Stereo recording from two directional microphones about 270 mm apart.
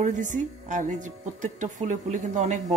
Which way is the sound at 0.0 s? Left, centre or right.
Right.